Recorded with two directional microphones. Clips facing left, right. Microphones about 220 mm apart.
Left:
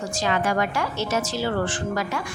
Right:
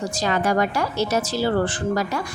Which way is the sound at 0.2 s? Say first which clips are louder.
Right 2 dB; 40° right (ahead or behind).